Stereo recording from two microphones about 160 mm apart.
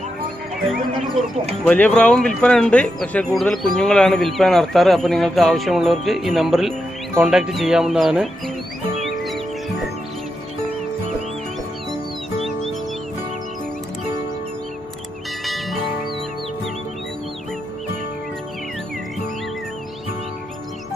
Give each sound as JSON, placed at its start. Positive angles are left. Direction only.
{"t": 1.7, "sound": "speech", "side_deg": 10}
{"t": 15.4, "sound": "music", "side_deg": 0}